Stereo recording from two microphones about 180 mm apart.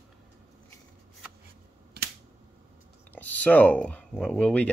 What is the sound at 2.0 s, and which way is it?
Finger snapping, 60° right (ahead or behind).